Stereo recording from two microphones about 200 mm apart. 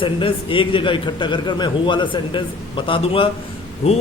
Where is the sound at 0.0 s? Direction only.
25° left (ahead or behind).